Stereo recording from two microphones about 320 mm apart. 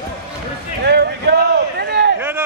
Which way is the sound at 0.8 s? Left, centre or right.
Right.